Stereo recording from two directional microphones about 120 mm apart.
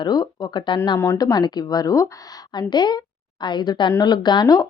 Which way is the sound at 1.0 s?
25° left (ahead or behind).